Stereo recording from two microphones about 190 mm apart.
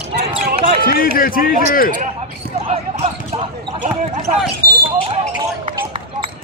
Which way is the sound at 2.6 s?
30° right (ahead or behind).